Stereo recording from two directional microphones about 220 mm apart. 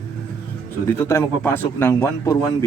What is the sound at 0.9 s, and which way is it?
A man's voice, 10° left (ahead or behind).